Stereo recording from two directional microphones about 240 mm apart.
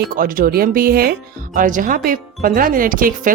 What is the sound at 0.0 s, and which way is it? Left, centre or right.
Speech, right.